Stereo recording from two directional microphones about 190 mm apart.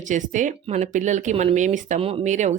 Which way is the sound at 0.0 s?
40° right (ahead or behind).